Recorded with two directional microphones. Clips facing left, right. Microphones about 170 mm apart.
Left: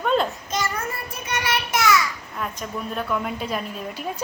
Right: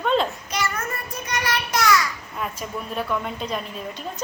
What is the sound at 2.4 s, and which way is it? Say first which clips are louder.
Speech: even; 5° right (ahead or behind).